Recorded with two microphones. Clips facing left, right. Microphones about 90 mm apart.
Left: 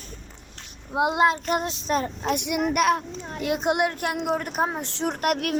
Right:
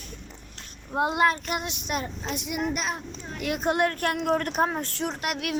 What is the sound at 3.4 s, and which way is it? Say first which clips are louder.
A woman's voice: left 1 dB; 20° left (ahead or behind).